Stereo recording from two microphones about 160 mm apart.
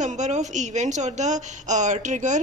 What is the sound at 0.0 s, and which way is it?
A woman's voice, 50° right (ahead or behind).